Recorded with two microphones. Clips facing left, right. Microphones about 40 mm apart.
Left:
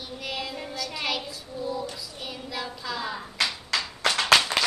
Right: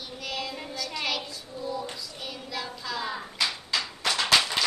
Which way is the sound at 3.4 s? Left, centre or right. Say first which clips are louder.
Left 2 dB; left.